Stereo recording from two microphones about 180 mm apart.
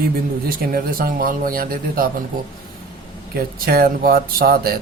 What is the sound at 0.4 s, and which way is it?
Speech, 50° right (ahead or behind).